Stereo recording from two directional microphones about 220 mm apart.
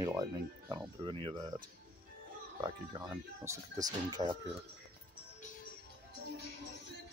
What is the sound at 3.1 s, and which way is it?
Speech, 15° right (ahead or behind).